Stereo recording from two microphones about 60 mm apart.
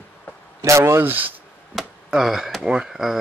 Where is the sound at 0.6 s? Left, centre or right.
Right.